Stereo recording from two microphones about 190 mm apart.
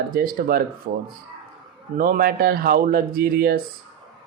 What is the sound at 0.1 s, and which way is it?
Speech, 50° right (ahead or behind).